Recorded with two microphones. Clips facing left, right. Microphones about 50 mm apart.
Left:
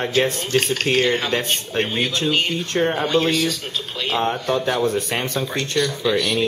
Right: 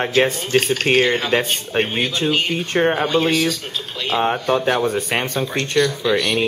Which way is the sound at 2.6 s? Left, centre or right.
Right.